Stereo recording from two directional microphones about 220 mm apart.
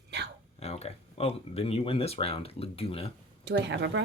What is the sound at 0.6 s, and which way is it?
Speech, 30° left (ahead or behind).